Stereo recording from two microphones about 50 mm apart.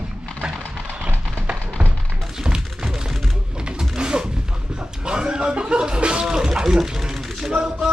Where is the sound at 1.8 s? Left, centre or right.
Right.